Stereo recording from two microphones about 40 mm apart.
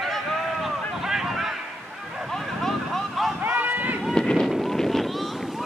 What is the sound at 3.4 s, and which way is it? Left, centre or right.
Run, right.